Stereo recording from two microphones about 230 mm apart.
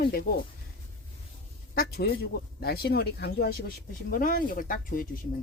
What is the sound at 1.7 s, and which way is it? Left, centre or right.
Speech, left.